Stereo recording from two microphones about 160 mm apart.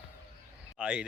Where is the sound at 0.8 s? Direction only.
5° right (ahead or behind).